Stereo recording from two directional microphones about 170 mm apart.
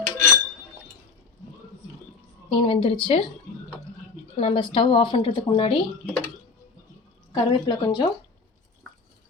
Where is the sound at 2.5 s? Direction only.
30° left (ahead or behind).